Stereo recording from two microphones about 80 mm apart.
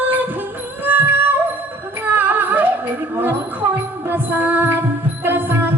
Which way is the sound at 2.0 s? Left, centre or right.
Right.